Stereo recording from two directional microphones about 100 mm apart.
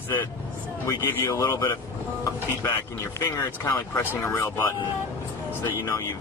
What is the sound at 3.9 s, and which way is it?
Speech, 20° left (ahead or behind).